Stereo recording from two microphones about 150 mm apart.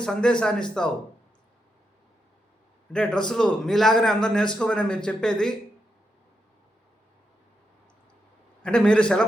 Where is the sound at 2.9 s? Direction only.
5° left (ahead or behind).